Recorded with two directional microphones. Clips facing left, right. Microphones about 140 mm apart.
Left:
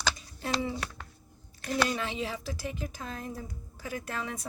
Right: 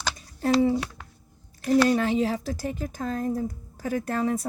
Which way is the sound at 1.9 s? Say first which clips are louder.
Right 10 dB; 40° right (ahead or behind).